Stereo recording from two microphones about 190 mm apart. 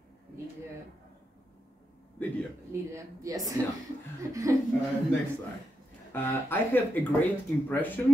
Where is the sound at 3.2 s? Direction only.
15° right (ahead or behind).